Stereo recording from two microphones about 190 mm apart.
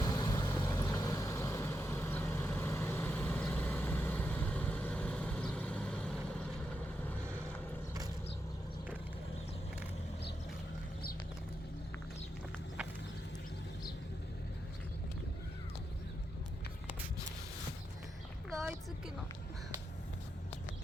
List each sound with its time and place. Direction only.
0.0 s vehicle: 20° left (ahead or behind); by 6.5 s 5° left (ahead or behind)